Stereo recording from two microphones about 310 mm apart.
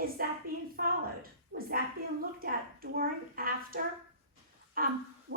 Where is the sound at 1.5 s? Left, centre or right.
Right.